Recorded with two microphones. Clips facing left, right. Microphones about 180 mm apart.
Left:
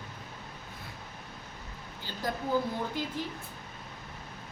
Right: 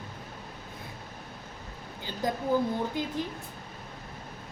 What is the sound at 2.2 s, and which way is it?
Speech, 20° right (ahead or behind).